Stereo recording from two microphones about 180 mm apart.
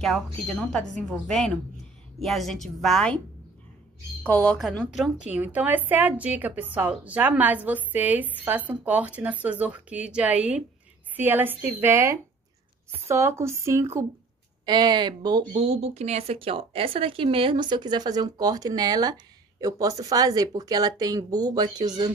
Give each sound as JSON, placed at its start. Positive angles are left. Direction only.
{"t": 0.0, "sound": "speech", "side_deg": 0}
{"t": 4.2, "sound": "a woman's voice", "side_deg": 10}
{"t": 15.5, "sound": "speech", "side_deg": -35}